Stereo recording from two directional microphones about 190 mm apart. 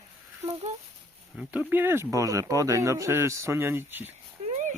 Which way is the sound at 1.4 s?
10° right (ahead or behind).